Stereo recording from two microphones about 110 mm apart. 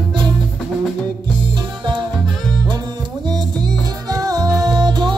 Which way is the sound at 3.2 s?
40° right (ahead or behind).